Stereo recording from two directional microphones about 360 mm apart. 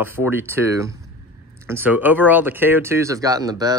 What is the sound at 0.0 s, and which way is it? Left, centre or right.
Speech, centre.